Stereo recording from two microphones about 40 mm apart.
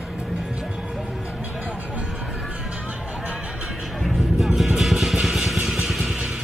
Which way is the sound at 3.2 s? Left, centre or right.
Right.